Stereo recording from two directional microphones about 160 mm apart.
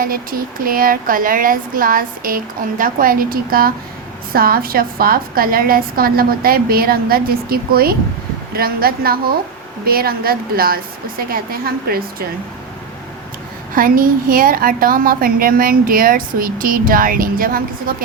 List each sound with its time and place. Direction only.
0.0 s a woman's voice: 65° right (ahead or behind)
13.7 s a woman's voice: 60° right (ahead or behind)